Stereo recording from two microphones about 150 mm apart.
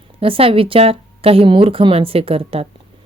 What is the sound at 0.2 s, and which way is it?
Speech, 40° right (ahead or behind).